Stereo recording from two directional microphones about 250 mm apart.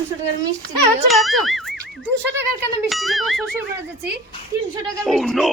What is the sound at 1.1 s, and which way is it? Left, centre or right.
Speech, centre.